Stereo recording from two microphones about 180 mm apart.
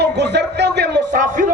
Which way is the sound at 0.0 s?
70° right (ahead or behind).